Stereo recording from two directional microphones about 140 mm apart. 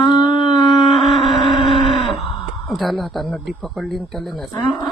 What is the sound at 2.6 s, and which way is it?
Speech, centre (ahead or behind).